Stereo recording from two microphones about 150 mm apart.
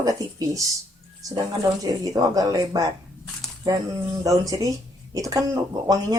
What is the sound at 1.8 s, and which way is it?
Speech, 25° right (ahead or behind).